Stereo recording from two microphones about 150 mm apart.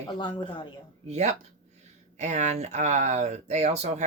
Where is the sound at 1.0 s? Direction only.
50° right (ahead or behind).